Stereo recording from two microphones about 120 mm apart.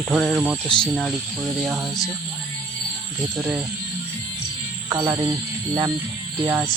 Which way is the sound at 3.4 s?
10° right (ahead or behind).